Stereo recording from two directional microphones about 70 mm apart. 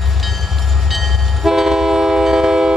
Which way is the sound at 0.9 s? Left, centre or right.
Centre.